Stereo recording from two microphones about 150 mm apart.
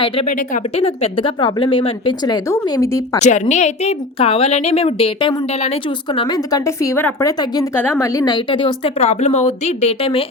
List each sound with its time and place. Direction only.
0.3 s speech: 60° left (ahead or behind)
0.8 s speech: 40° left (ahead or behind); by 3.2 s 20° left (ahead or behind)
3.2 s speech: 50° left (ahead or behind)
6.1 s a woman's voice: 25° left (ahead or behind)
9.0 s speech: 45° left (ahead or behind)